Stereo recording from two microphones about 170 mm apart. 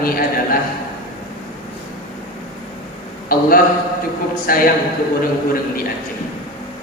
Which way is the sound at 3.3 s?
60° left (ahead or behind).